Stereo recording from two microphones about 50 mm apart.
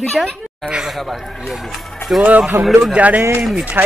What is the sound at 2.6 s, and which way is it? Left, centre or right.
Speech, right.